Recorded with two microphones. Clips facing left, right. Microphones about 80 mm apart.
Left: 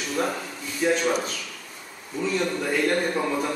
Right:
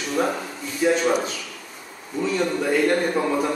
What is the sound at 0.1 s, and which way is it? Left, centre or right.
A man's voice, centre.